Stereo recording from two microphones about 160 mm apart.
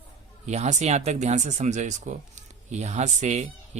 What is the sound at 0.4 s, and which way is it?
Speech, 45° right (ahead or behind).